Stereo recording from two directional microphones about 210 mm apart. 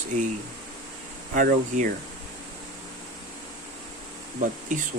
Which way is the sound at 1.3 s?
40° right (ahead or behind).